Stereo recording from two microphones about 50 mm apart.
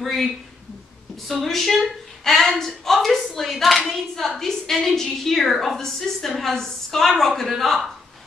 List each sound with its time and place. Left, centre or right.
0.0 s a woman's voice: centre